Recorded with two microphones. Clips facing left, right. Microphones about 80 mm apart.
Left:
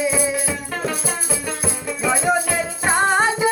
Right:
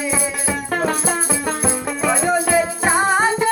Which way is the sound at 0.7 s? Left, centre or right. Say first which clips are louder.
Right 7 dB; right.